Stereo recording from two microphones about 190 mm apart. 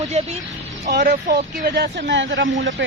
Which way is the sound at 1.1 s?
40° right (ahead or behind).